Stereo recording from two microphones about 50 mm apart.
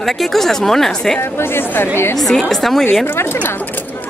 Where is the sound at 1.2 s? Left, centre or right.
Left.